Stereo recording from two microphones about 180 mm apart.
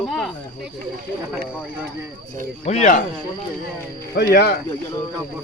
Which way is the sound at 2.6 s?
40° left (ahead or behind).